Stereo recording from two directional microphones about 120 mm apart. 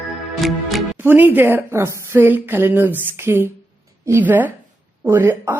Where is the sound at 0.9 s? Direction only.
15° right (ahead or behind).